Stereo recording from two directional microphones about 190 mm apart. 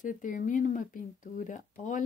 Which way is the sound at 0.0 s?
40° left (ahead or behind).